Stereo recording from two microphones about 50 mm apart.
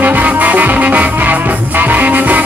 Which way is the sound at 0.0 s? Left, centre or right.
Right.